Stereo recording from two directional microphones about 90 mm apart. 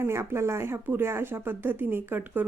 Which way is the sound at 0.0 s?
30° right (ahead or behind).